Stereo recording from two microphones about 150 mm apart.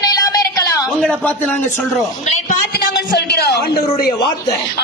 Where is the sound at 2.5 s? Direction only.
90° left.